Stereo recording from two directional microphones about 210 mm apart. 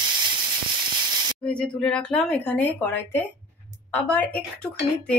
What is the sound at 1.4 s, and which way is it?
A woman's voice, 5° left (ahead or behind).